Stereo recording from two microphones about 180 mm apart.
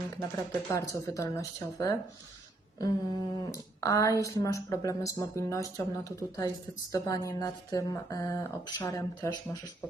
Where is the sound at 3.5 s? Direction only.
20° left (ahead or behind).